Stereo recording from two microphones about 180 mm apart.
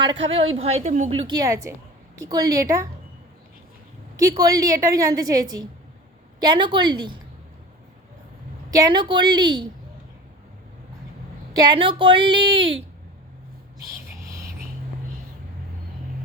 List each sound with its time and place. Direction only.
0.0 s a woman's voice: 30° right (ahead or behind)
1.3 s a woman's voice: 20° right (ahead or behind)
4.2 s a woman's voice: 20° right (ahead or behind)
8.7 s a woman's voice: 20° right (ahead or behind)
11.6 s a woman's voice: 25° right (ahead or behind)